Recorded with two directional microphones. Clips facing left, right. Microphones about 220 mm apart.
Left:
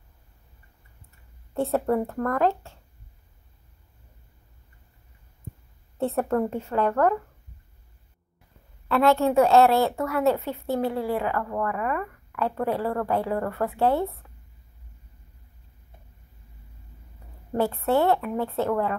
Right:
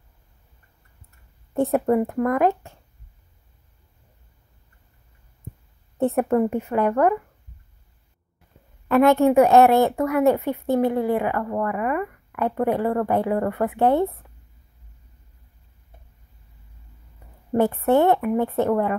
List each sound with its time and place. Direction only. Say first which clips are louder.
1.5 s a woman's voice: right 4 dB; 15° right (ahead or behind)
5.9 s a woman's voice: right 4 dB; 15° right (ahead or behind)
8.8 s a woman's voice: right 5 dB; 15° right (ahead or behind)
17.6 s a woman's voice: right 4 dB; 20° right (ahead or behind)